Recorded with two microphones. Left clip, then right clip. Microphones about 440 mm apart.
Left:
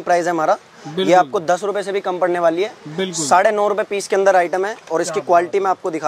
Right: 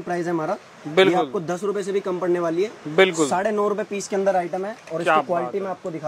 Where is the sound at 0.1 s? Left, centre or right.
Left.